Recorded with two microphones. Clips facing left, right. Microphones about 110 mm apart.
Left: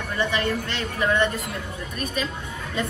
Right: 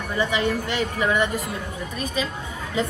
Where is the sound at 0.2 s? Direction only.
15° right (ahead or behind).